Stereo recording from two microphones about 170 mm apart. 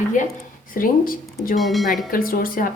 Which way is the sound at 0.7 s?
55° left (ahead or behind).